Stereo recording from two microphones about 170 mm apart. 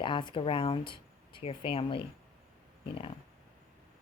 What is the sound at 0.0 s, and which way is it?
Speech, 30° left (ahead or behind).